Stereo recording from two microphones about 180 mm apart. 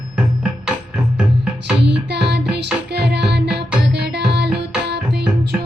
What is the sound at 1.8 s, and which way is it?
Music, 70° right (ahead or behind).